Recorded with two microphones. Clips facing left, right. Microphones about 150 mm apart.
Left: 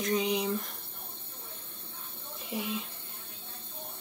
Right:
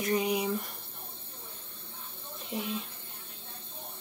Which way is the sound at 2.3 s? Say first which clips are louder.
Even; centre (ahead or behind).